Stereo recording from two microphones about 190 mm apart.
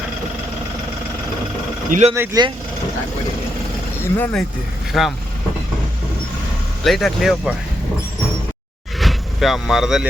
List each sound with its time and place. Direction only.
1.9 s speech: 35° right (ahead or behind)
2.1 s speech: 15° right (ahead or behind)
4.2 s speech: 5° left (ahead or behind)
6.8 s speech: centre (ahead or behind)
9.0 s vehicle: centre (ahead or behind)